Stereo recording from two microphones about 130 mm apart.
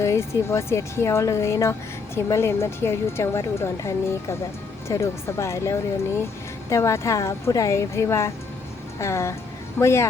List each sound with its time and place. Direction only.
0.0 s speech: 20° left (ahead or behind)